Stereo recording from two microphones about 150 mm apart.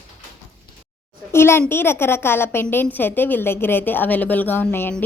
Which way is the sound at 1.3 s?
15° left (ahead or behind).